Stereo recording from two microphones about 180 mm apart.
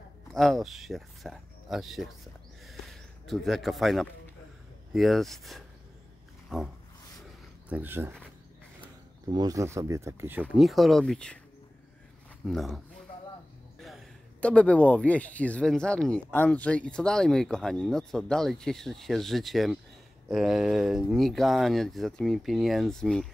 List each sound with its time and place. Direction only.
0.3 s speech: centre (ahead or behind)
2.6 s a sound: centre (ahead or behind)
4.9 s speech: centre (ahead or behind)
6.5 s a sound: 5° right (ahead or behind)
7.7 s speech: 10° right (ahead or behind)
9.3 s speech: 20° right (ahead or behind)
10.5 s speech: centre (ahead or behind)
12.4 s speech: centre (ahead or behind)